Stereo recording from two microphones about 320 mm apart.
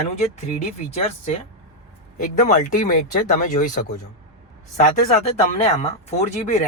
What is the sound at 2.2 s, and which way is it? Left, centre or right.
Speech, left.